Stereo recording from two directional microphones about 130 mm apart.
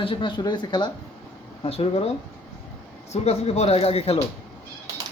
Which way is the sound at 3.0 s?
55° left (ahead or behind).